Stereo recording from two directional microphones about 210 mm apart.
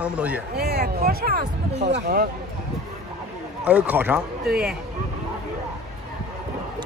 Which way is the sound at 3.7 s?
5° right (ahead or behind).